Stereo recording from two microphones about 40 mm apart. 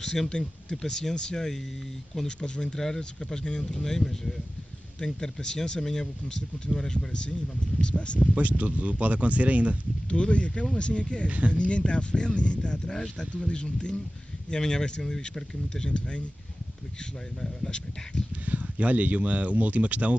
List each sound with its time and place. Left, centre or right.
0.0 s speech: centre
0.3 s speech: left
8.4 s speech: right
10.0 s speech: left
11.2 s speech: right
11.5 s speech: left
17.4 s speech: left
18.4 s speech: right